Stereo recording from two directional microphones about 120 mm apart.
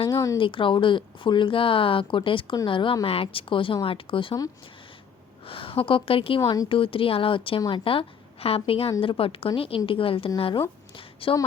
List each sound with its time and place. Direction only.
0.1 s speech: 30° left (ahead or behind)
0.3 s speech: 45° left (ahead or behind)
5.5 s speech: 50° left (ahead or behind)
6.4 s speech: 30° left (ahead or behind)
6.7 s a woman's voice: 50° left (ahead or behind)
10.9 s a sound: 50° left (ahead or behind)